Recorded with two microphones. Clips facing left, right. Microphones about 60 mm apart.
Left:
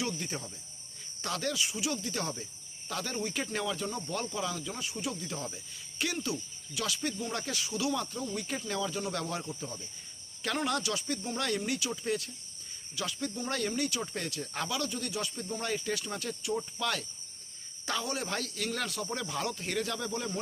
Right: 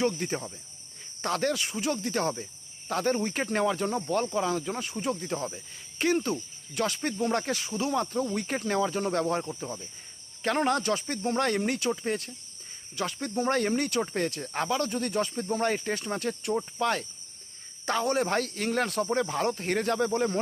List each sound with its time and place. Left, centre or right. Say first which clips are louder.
0.0 s speech: right 7 dB; right
16.6 s speech: right 6 dB; right